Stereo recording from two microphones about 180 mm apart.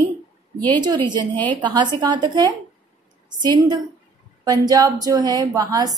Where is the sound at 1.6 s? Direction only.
25° right (ahead or behind).